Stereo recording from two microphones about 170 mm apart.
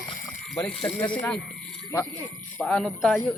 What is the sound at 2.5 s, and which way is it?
Speech, centre (ahead or behind).